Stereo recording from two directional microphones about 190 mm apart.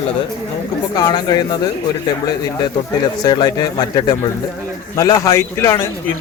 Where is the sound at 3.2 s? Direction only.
25° left (ahead or behind).